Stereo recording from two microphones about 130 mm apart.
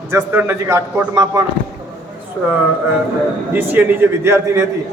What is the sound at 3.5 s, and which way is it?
A man's voice, 15° right (ahead or behind).